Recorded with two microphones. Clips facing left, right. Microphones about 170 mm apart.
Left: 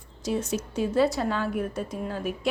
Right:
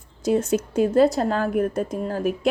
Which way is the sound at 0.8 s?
45° right (ahead or behind).